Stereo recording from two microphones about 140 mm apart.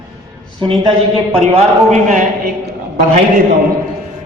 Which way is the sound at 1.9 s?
60° right (ahead or behind).